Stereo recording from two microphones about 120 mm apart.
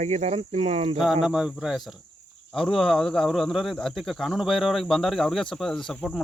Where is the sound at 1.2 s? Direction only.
5° right (ahead or behind).